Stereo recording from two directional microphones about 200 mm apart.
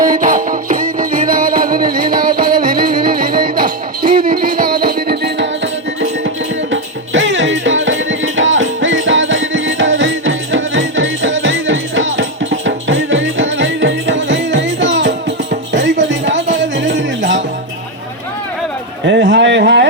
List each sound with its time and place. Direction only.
0.0 s music: 40° right (ahead or behind)
6.0 s music: 65° right (ahead or behind)
19.0 s a sound: 65° right (ahead or behind)